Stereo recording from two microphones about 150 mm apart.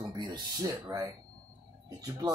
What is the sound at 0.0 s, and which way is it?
Speech, 30° right (ahead or behind).